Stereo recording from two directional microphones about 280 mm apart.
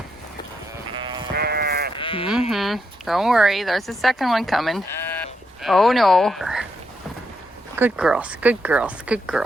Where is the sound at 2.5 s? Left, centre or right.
Centre.